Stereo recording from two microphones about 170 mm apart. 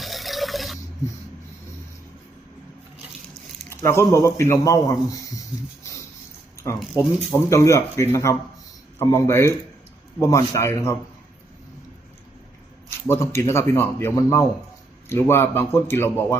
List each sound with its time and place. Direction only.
0.0 s fill: centre (ahead or behind)
3.7 s speech: 15° left (ahead or behind)
6.9 s a man's voice: 15° left (ahead or behind)
13.1 s speech: 15° left (ahead or behind)